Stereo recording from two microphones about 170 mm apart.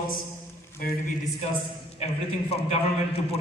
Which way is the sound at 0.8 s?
55° left (ahead or behind).